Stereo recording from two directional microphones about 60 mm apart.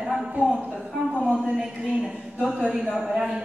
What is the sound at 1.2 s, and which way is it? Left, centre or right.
A woman's voice, centre.